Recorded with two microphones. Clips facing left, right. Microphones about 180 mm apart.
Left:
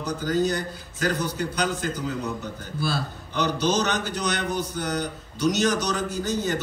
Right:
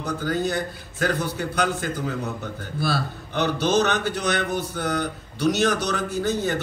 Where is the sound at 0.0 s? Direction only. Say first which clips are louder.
Left 1 dB; 55° right (ahead or behind).